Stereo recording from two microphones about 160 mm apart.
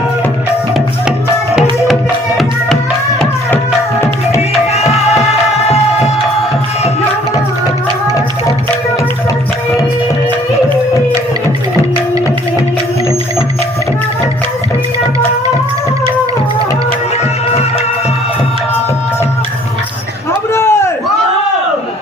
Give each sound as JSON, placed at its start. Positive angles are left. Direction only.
{"t": 4.4, "sound": "music", "side_deg": 40}
{"t": 20.5, "sound": "chop", "side_deg": 15}